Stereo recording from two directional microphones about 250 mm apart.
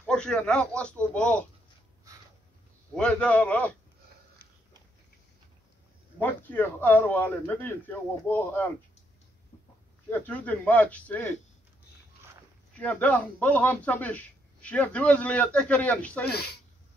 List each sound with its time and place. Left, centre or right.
0.0 s a man's voice: centre
3.0 s a man's voice: centre
6.1 s a man's voice: centre
10.0 s a man's voice: centre
12.7 s a man's voice: centre
16.3 s speech: left